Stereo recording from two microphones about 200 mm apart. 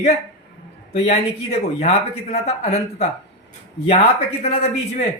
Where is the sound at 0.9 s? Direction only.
35° left (ahead or behind).